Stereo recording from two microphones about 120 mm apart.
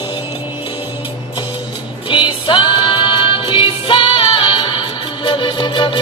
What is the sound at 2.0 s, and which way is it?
Music, 45° left (ahead or behind).